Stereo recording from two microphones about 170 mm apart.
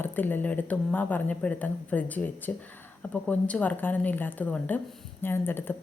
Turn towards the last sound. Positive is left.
turn(degrees=10)  # may be behind; listen again after turning